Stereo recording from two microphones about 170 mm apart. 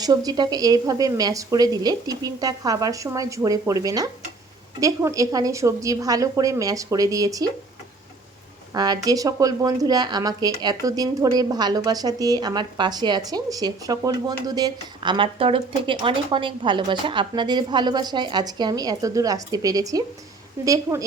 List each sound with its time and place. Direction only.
0.0 s speech: 20° right (ahead or behind)
8.7 s speech: 25° right (ahead or behind)